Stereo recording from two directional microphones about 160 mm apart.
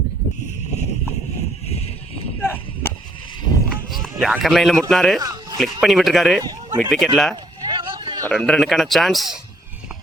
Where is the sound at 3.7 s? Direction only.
Centre (ahead or behind).